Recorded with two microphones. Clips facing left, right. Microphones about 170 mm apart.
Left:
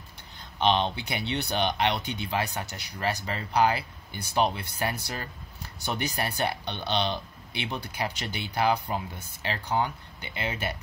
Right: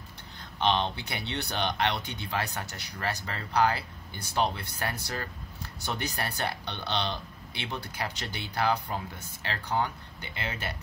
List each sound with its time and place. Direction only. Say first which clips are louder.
0.6 s speech: left 3 dB; 15° left (ahead or behind)